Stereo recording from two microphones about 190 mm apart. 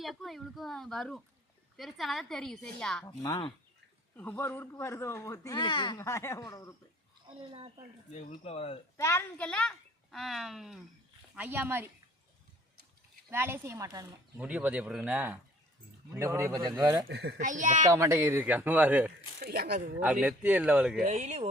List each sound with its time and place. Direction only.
0.0 s a child's voice: centre (ahead or behind)
3.2 s speech: 25° left (ahead or behind)
4.2 s speech: 10° left (ahead or behind); by 6.0 s 25° left (ahead or behind)
6.0 s speech: 15° left (ahead or behind)
8.3 s speech: 30° left (ahead or behind)
9.0 s a child's voice: 15° left (ahead or behind); by 11.9 s 10° right (ahead or behind)
13.3 s speech: 15° right (ahead or behind)
17.1 s a child's voice: 60° right (ahead or behind)
17.4 s speech: 40° right (ahead or behind)
17.8 s speech: 15° right (ahead or behind)
19.4 s speech: 55° right (ahead or behind)
20.2 s a child's voice: 10° right (ahead or behind)
21.0 s speech: 35° right (ahead or behind)